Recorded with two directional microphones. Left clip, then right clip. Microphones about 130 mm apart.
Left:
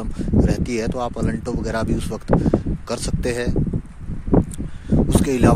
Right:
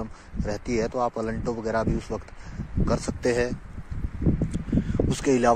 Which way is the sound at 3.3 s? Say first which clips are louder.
Even; 25° left (ahead or behind).